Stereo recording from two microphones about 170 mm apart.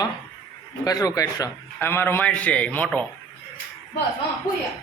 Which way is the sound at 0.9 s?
20° left (ahead or behind).